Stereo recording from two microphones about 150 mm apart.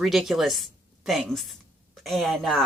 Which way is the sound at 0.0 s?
Centre (ahead or behind).